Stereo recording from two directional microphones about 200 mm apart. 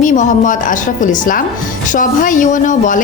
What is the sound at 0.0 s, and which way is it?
A woman's voice, 40° left (ahead or behind).